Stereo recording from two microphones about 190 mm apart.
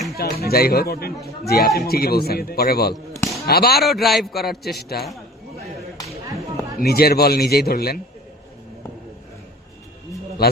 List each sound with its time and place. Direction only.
0.4 s a man's voice: 55° left (ahead or behind)
3.8 s a man's voice: centre (ahead or behind)
4.4 s a man's voice: 55° left (ahead or behind)
6.2 s a sound: 15° right (ahead or behind)
6.7 s a man's voice: 55° left (ahead or behind)
10.4 s a man's voice: 55° left (ahead or behind)